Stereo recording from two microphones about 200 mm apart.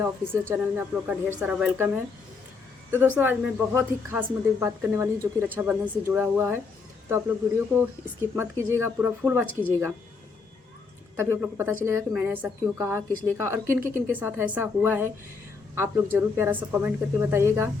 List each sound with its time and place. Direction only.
0.0 s a woman's voice: 10° right (ahead or behind)
2.9 s a woman's voice: 10° right (ahead or behind)
11.2 s a woman's voice: 10° right (ahead or behind)